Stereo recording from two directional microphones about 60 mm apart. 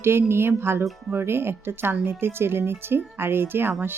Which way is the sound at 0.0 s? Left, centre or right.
Right.